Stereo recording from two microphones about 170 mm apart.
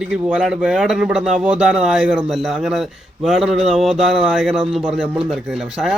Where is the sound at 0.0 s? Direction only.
5° right (ahead or behind).